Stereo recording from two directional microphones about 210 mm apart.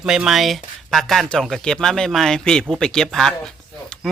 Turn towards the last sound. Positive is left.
turn(degrees=5)  # may be behind; listen again after turning